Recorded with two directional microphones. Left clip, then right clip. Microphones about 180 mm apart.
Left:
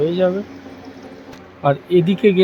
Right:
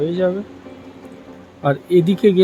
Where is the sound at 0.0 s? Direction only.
10° right (ahead or behind).